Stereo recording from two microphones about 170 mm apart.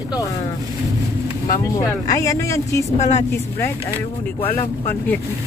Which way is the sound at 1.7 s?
20° left (ahead or behind).